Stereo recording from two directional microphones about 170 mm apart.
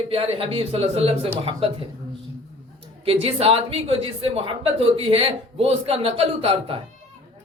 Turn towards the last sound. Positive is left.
turn(degrees=-35)  # may be behind; listen again after turning